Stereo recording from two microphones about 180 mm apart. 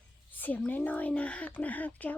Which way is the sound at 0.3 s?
10° left (ahead or behind).